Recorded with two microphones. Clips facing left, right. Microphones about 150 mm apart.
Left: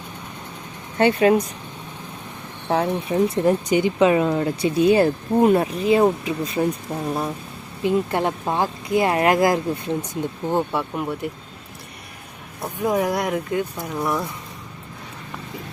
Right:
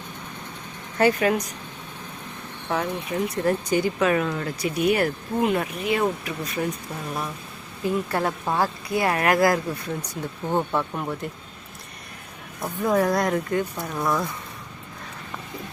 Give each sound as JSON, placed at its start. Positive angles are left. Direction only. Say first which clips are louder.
{"t": 0.9, "sound": "speech", "louder": "left 4 dB", "side_deg": 25}
{"t": 2.6, "sound": "speech", "louder": "left 5 dB", "side_deg": 30}
{"t": 3.4, "sound": "speech", "louder": "left 4 dB", "side_deg": 20}
{"t": 10.5, "sound": "speech", "louder": "left 1 dB", "side_deg": 10}
{"t": 12.6, "sound": "speech", "louder": "even", "side_deg": 10}